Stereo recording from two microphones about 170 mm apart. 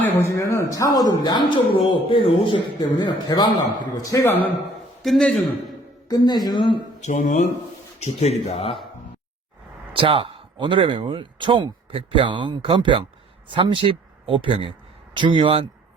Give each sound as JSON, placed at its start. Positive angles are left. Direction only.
{"t": 0.0, "sound": "a man's voice", "side_deg": 15}
{"t": 5.0, "sound": "a man's voice", "side_deg": 5}
{"t": 6.1, "sound": "a man's voice", "side_deg": 25}
{"t": 7.0, "sound": "speech", "side_deg": 45}
{"t": 9.9, "sound": "speech", "side_deg": -30}